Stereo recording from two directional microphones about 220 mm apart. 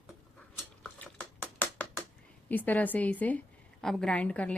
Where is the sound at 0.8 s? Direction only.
5° left (ahead or behind).